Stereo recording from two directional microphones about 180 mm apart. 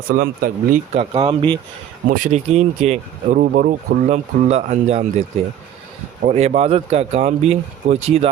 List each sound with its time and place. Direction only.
0.1 s speech: 50° right (ahead or behind)
1.1 s speech: 30° right (ahead or behind)
2.0 s speech: 45° right (ahead or behind)
6.2 s speech: 40° right (ahead or behind)